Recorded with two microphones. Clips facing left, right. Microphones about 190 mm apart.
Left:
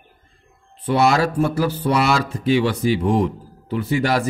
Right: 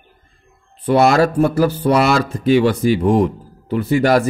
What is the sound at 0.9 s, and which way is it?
Speech, 50° right (ahead or behind).